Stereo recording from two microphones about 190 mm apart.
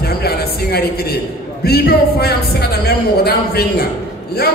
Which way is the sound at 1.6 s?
55° left (ahead or behind).